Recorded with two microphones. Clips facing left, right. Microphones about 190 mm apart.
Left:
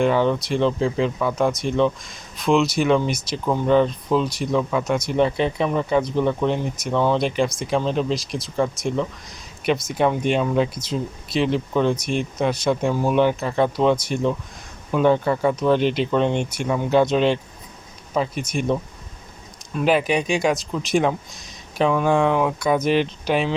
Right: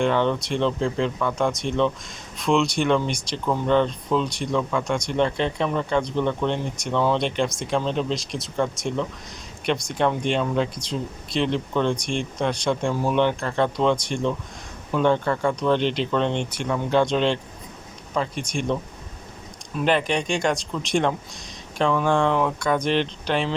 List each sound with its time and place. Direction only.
0.0 s speech: 5° left (ahead or behind)